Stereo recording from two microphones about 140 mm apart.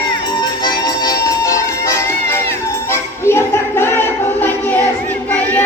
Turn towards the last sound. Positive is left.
turn(degrees=10)  # may be behind; listen again after turning